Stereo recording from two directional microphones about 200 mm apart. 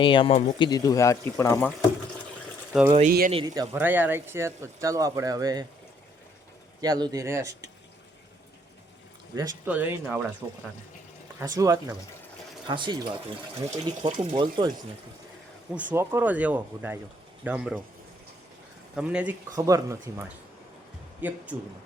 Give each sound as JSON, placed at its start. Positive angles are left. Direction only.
{"t": 0.0, "sound": "speech", "side_deg": 25}
{"t": 3.1, "sound": "speech", "side_deg": -45}
{"t": 3.3, "sound": "speech", "side_deg": -20}
{"t": 6.8, "sound": "speech", "side_deg": -20}
{"t": 9.6, "sound": "speech", "side_deg": -10}
{"t": 11.3, "sound": "speech", "side_deg": -20}
{"t": 15.7, "sound": "speech", "side_deg": -10}
{"t": 18.9, "sound": "speech", "side_deg": -5}